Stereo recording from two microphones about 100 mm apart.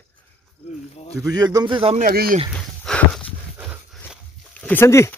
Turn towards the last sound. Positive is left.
turn(degrees=30)  # may be behind; listen again after turning